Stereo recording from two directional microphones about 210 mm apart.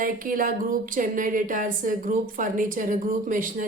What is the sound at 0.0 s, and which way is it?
Speech, 40° right (ahead or behind).